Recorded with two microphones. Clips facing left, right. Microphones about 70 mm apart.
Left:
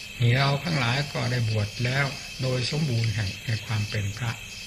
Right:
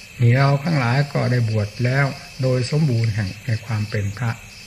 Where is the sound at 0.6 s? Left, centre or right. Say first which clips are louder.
Right 7 dB; right.